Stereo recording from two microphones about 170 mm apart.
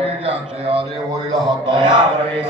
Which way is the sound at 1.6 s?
30° right (ahead or behind).